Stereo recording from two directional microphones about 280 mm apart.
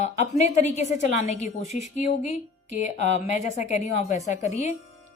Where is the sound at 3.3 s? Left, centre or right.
Left.